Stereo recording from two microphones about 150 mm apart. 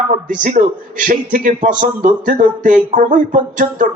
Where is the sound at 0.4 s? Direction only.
60° right (ahead or behind).